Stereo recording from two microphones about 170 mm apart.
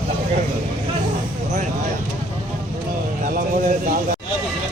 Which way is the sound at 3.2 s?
55° right (ahead or behind).